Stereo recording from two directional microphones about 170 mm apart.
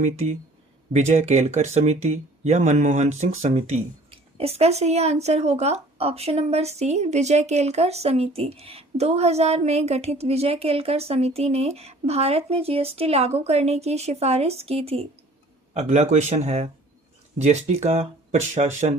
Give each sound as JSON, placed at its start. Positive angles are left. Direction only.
{"t": 0.0, "sound": "speech", "side_deg": -40}